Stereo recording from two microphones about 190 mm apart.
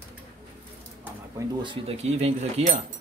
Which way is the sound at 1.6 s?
30° right (ahead or behind).